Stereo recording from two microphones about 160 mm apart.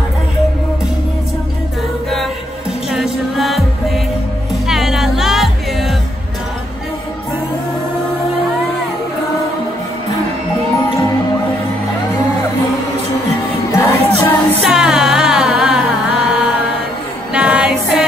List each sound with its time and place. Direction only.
2.9 s music: centre (ahead or behind)
13.7 s music: 20° left (ahead or behind)
14.6 s music: 5° right (ahead or behind)